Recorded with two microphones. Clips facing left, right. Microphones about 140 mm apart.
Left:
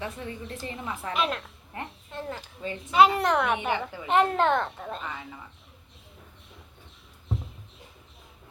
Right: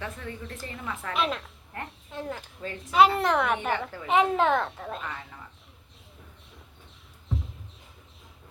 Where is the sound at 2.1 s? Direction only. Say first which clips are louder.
Right 2 dB; centre (ahead or behind).